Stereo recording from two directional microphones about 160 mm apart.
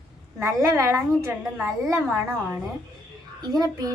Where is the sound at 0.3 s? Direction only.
15° right (ahead or behind).